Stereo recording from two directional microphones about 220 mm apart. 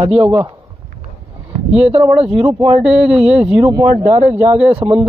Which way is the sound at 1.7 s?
30° right (ahead or behind).